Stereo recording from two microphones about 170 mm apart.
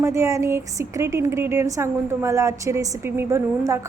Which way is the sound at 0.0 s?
15° right (ahead or behind).